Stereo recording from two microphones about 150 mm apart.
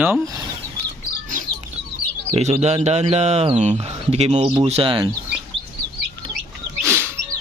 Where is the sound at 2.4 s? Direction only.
45° right (ahead or behind).